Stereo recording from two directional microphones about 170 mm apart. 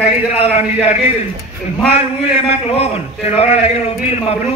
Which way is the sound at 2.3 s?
35° left (ahead or behind).